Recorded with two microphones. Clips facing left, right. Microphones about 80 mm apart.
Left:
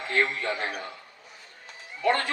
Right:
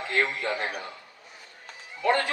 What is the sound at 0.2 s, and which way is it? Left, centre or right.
Speech, right.